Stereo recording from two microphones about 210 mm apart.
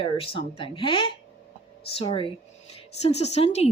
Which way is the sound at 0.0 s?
25° left (ahead or behind).